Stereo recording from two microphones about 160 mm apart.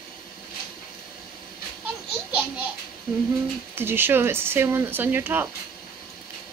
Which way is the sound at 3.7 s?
15° right (ahead or behind).